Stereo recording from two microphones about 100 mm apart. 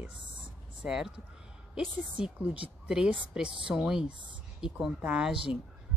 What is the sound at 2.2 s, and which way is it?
A woman's voice, 15° right (ahead or behind).